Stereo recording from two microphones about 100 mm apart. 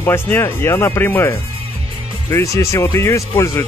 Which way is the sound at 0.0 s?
25° left (ahead or behind).